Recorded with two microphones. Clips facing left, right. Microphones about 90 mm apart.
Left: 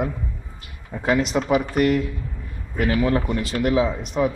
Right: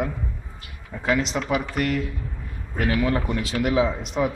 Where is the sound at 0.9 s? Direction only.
25° left (ahead or behind).